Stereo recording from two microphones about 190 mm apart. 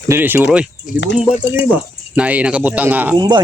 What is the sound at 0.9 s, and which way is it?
Speech, 45° left (ahead or behind).